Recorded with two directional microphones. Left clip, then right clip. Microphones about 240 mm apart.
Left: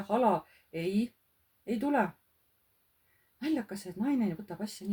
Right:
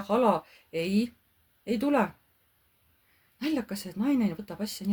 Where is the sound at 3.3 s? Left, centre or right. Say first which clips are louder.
Right 3 dB; right.